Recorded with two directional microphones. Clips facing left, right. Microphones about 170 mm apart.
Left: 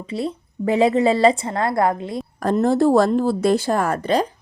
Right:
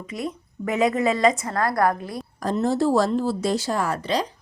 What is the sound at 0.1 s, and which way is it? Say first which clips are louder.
A woman's voice: left 5 dB; 30° left (ahead or behind).